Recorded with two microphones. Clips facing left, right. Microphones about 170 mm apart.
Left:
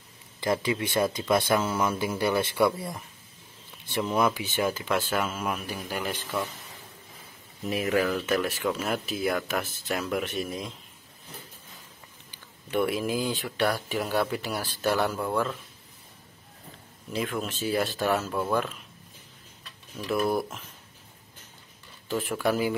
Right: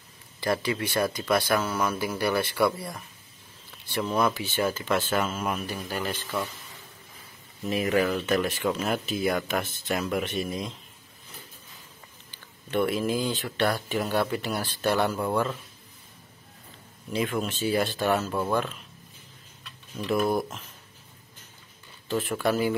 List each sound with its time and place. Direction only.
0.4 s speech: 20° left (ahead or behind)
4.0 s speech: 10° left (ahead or behind)
7.6 s speech: 5° left (ahead or behind)
12.3 s speech: 10° left (ahead or behind)
17.1 s speech: centre (ahead or behind)
20.0 s speech: 5° left (ahead or behind)
22.0 s speech: 5° left (ahead or behind)